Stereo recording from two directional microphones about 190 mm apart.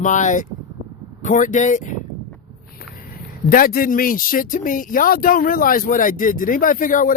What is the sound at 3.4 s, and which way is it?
Speech, 50° left (ahead or behind).